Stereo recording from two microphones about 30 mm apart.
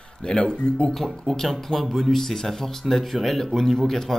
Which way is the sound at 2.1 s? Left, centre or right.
Centre.